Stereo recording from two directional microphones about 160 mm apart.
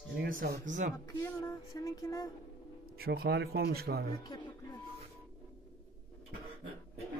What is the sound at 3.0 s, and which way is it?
Speech, 80° right.